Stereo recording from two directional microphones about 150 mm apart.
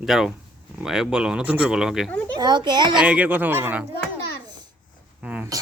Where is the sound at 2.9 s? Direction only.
10° right (ahead or behind).